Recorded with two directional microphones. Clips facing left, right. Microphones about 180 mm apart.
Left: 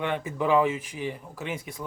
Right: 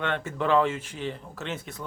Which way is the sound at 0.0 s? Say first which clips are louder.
Left 1 dB; 10° left (ahead or behind).